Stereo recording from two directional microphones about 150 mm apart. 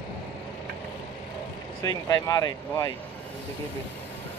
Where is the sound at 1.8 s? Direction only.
25° left (ahead or behind).